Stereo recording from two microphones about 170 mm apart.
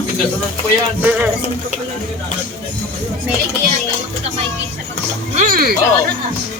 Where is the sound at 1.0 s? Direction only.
10° right (ahead or behind).